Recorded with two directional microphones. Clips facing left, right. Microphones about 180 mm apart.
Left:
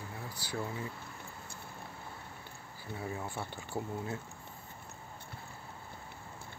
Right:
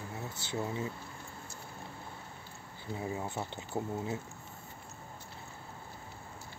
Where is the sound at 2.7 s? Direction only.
20° right (ahead or behind).